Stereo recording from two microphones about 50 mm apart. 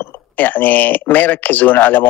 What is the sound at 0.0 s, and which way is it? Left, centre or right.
Speech, left.